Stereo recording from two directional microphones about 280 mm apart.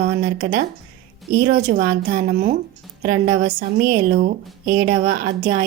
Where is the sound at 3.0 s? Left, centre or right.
Right.